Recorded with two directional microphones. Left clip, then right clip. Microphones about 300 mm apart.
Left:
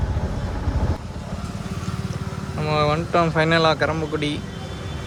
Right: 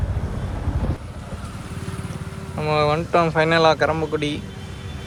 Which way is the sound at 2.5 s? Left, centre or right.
Centre.